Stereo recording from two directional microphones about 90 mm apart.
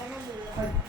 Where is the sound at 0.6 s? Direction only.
35° right (ahead or behind).